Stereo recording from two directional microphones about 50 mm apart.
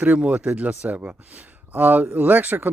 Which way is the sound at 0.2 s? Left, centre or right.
Right.